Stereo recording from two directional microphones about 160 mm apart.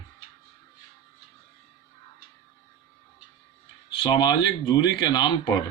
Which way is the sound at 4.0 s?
25° left (ahead or behind).